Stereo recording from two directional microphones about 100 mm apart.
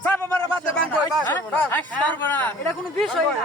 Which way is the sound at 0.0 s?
20° left (ahead or behind).